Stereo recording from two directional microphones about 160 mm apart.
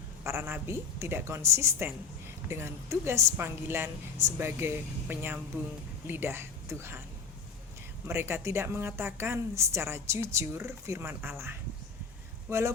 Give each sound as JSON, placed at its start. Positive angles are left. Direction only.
{"t": 0.3, "sound": "a woman's voice", "side_deg": -15}
{"t": 8.0, "sound": "a woman's voice", "side_deg": -15}